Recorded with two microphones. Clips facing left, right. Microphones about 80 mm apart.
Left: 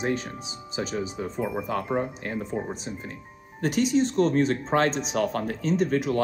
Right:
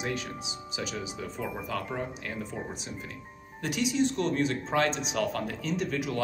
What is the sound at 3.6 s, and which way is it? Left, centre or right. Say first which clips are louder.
Speech: left 5 dB; left.